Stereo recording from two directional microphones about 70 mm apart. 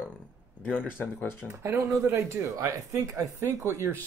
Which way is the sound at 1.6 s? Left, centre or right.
Right.